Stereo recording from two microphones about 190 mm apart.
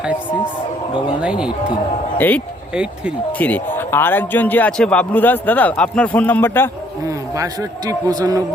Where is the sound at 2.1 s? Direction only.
10° left (ahead or behind).